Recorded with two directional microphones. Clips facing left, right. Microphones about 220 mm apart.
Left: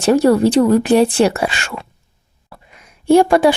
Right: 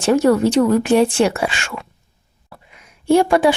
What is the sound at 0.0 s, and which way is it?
Speech, 35° left (ahead or behind).